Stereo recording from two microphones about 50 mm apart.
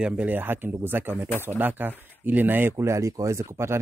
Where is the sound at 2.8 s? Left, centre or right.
Right.